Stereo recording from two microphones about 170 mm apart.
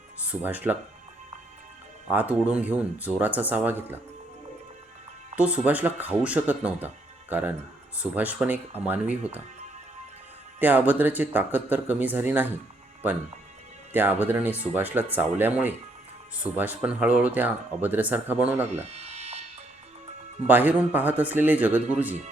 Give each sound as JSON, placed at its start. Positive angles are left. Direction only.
{"t": 0.2, "sound": "speech", "side_deg": -10}
{"t": 2.0, "sound": "speech", "side_deg": -10}
{"t": 5.4, "sound": "speech", "side_deg": -10}
{"t": 10.6, "sound": "speech", "side_deg": -10}
{"t": 13.9, "sound": "speech", "side_deg": -10}
{"t": 18.6, "sound": "a sound", "side_deg": -40}
{"t": 20.5, "sound": "speech", "side_deg": -10}